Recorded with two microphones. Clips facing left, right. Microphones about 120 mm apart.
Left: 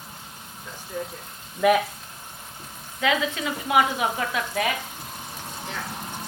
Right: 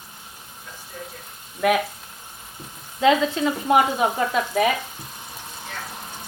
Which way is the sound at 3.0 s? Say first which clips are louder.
Right 6 dB; 30° right (ahead or behind).